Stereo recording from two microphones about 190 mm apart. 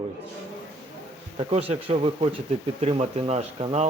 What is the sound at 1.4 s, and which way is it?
A man's voice, 30° right (ahead or behind).